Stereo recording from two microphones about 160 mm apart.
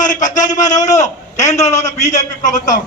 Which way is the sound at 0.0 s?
50° left (ahead or behind).